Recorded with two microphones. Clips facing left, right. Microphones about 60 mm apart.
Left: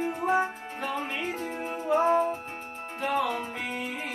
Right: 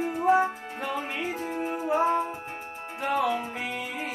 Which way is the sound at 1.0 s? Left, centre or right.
Centre.